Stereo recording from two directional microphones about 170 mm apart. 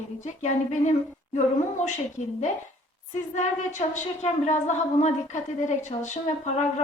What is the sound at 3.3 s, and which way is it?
A woman's voice, 45° left (ahead or behind).